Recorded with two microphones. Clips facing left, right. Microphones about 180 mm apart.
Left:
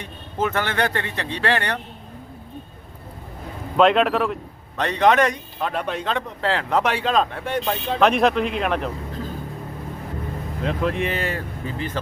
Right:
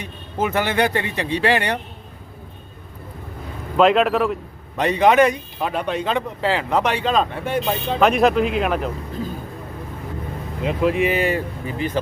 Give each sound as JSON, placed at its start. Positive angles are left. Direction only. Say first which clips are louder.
{"t": 0.0, "sound": "a man's voice", "louder": "right 1 dB", "side_deg": -10}
{"t": 3.8, "sound": "speech", "louder": "right 1 dB", "side_deg": 0}
{"t": 10.6, "sound": "a man's voice", "louder": "right 4 dB", "side_deg": -10}